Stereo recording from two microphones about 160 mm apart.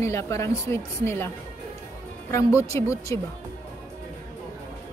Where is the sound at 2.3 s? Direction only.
20° left (ahead or behind).